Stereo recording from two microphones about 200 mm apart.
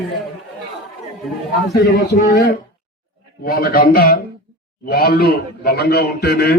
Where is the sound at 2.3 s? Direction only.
55° left (ahead or behind).